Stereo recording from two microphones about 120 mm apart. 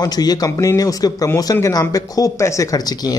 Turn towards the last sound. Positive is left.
turn(degrees=35)  # may be behind; listen again after turning